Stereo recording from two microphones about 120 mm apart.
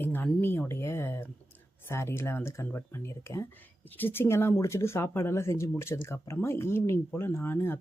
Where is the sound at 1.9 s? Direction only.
20° left (ahead or behind).